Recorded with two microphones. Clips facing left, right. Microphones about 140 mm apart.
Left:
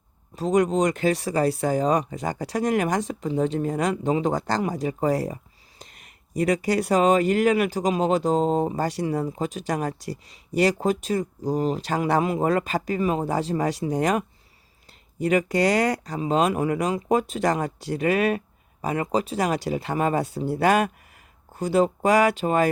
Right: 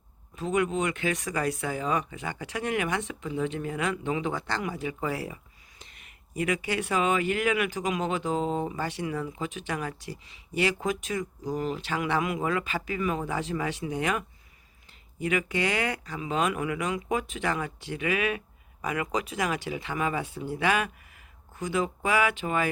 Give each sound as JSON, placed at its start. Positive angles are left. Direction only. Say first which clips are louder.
{"t": 0.3, "sound": "speech", "louder": "left 6 dB", "side_deg": 35}